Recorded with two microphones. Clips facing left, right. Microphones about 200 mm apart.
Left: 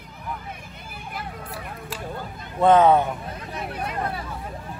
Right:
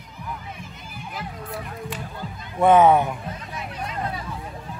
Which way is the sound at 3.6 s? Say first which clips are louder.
Left 3 dB; 55° left (ahead or behind).